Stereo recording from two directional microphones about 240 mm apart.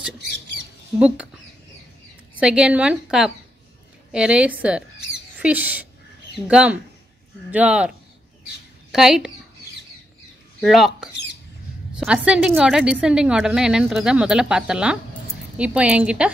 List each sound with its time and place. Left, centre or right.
0.9 s a woman's voice: centre
2.4 s a woman's voice: centre
8.9 s a woman's voice: centre
10.6 s speech: centre
11.9 s a woman's voice: centre